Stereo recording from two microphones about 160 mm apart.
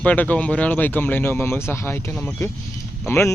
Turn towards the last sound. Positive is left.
turn(degrees=15)  # may be behind; listen again after turning